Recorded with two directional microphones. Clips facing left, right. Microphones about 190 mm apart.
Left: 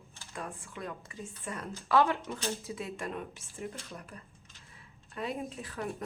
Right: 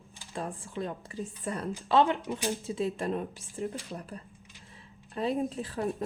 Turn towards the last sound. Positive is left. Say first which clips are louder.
# right 6 dB
turn(degrees=-30)  # may be behind; listen again after turning